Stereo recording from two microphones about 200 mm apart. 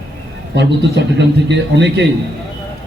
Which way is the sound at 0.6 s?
60° right (ahead or behind).